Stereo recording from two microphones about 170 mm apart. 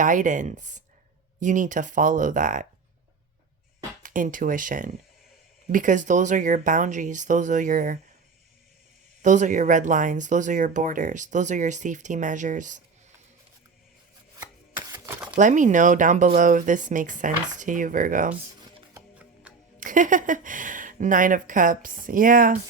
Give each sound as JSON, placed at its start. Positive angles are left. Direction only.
{"t": 0.0, "sound": "speech", "side_deg": -50}
{"t": 4.0, "sound": "speech", "side_deg": -50}
{"t": 9.2, "sound": "speech", "side_deg": -45}
{"t": 15.0, "sound": "a sound", "side_deg": -10}
{"t": 15.4, "sound": "speech", "side_deg": -50}
{"t": 19.5, "sound": "a sound", "side_deg": -5}
{"t": 19.8, "sound": "speech", "side_deg": -50}